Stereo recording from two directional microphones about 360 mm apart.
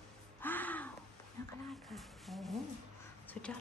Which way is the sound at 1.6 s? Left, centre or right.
Centre.